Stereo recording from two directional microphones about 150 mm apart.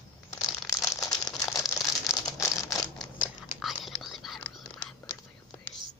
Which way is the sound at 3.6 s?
Centre (ahead or behind).